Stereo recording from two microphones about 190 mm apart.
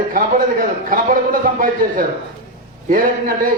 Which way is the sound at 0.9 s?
45° right (ahead or behind).